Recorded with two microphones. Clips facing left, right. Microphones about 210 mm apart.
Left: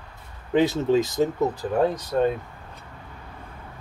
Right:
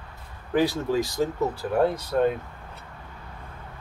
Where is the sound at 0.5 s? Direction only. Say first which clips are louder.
Left 3 dB; 20° left (ahead or behind).